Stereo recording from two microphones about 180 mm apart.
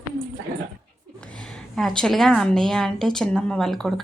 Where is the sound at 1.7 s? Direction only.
Centre (ahead or behind).